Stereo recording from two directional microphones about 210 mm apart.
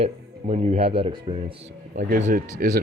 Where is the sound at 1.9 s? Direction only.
45° right (ahead or behind).